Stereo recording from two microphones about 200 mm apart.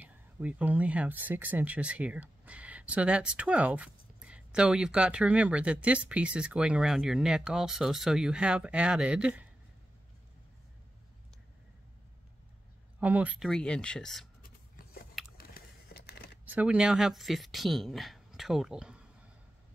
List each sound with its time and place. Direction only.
0.0 s speech: 5° right (ahead or behind)
13.0 s speech: 5° right (ahead or behind)
15.3 s a sound: 50° left (ahead or behind)
16.4 s speech: 5° right (ahead or behind)